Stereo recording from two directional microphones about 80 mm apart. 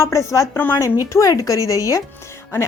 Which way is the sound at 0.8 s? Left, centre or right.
Left.